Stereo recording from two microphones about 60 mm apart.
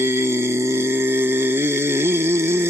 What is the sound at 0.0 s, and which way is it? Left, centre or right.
Music, right.